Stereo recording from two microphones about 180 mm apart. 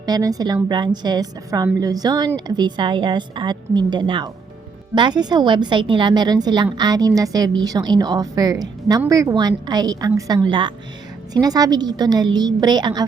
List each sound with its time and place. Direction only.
0.0 s a woman's voice: 20° right (ahead or behind)